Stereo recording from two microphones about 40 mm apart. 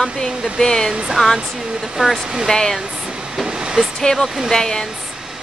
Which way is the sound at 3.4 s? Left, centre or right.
Centre.